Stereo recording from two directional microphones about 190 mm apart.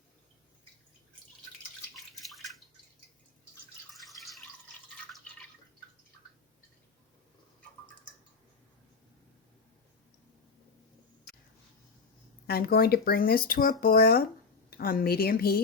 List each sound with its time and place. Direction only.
2.2 s drip: centre (ahead or behind)
12.5 s speech: 55° left (ahead or behind)